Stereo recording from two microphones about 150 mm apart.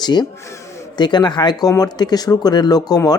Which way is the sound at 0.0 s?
30° left (ahead or behind).